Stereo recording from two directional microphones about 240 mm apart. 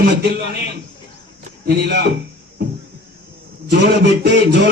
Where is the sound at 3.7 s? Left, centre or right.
Right.